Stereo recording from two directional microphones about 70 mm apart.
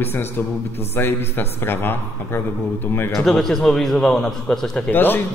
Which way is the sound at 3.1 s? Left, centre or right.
Centre.